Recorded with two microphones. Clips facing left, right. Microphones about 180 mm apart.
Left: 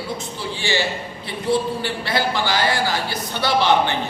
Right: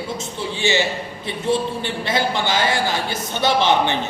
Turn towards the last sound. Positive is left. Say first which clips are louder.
# even
turn(degrees=-20)  # may be behind; listen again after turning